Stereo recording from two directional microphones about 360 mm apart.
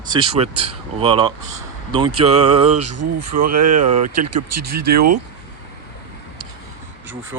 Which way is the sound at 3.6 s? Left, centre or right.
Right.